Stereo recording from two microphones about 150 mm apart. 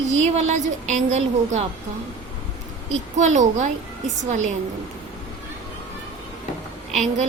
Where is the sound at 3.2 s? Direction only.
50° right (ahead or behind).